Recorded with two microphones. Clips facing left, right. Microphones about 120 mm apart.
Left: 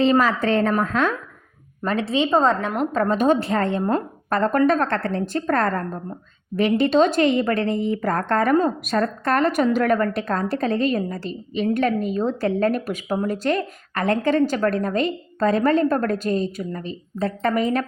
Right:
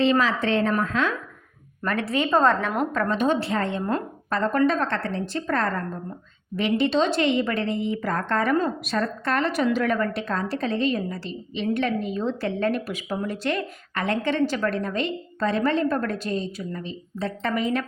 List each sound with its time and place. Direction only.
0.0 s a woman's voice: 45° left (ahead or behind)
1.8 s a woman's voice: 25° left (ahead or behind)
2.9 s a woman's voice: 30° left (ahead or behind)
3.2 s a woman's voice: 45° left (ahead or behind)